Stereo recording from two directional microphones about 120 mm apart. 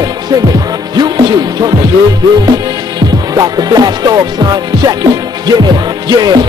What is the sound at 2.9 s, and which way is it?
Music, 30° right (ahead or behind).